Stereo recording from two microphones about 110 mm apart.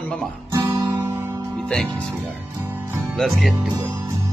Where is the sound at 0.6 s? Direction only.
25° right (ahead or behind).